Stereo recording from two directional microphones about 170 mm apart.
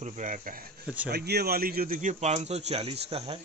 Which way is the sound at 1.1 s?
70° right (ahead or behind).